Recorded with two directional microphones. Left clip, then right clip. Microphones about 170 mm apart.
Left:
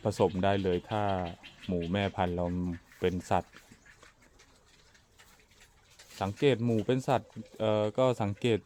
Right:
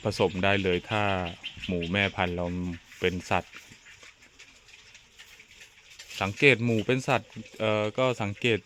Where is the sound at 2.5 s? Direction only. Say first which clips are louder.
Right 1 dB; 10° right (ahead or behind).